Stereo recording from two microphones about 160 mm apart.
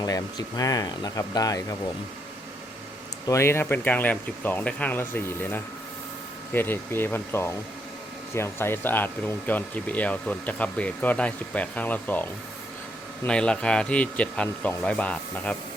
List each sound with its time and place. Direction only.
0.0 s speech: 25° left (ahead or behind)
3.2 s speech: 15° left (ahead or behind)